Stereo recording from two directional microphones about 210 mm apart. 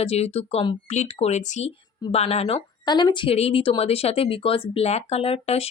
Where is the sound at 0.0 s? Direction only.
30° left (ahead or behind).